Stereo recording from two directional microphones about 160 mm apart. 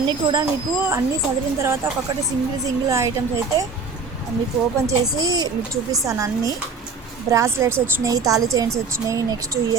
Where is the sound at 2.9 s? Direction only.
20° right (ahead or behind).